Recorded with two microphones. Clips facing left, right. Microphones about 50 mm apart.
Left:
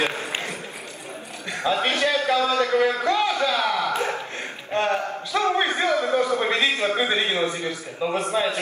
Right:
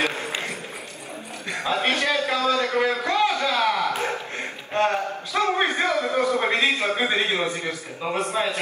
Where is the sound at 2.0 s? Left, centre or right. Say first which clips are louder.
Left 1 dB; right.